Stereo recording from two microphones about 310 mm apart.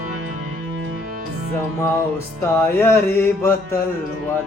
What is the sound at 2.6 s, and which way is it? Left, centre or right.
Mantra, centre.